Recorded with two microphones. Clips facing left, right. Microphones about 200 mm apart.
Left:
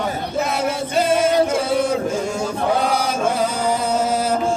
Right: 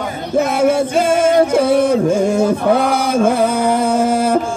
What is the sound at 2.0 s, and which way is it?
Chant, 55° right (ahead or behind).